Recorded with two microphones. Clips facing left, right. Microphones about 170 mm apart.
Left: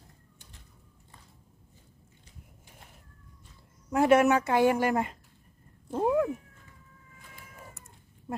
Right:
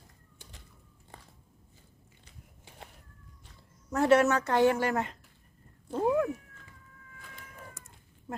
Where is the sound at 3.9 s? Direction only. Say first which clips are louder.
Left 2 dB; 10° left (ahead or behind).